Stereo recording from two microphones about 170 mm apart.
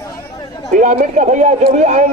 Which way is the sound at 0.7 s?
45° right (ahead or behind).